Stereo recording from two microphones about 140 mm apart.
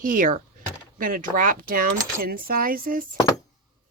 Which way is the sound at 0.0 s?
75° right (ahead or behind).